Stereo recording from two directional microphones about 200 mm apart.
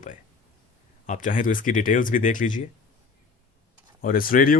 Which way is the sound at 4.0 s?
45° left (ahead or behind).